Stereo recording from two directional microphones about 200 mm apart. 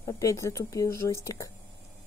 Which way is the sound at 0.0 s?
15° left (ahead or behind).